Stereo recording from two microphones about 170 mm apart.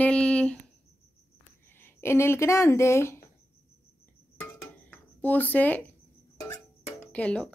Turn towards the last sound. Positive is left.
turn(degrees=5)  # may be behind; listen again after turning